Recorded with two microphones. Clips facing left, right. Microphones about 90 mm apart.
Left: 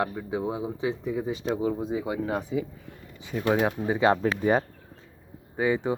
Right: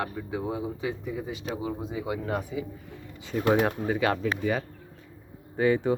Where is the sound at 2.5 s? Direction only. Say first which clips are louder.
Left 4 dB; 45° left (ahead or behind).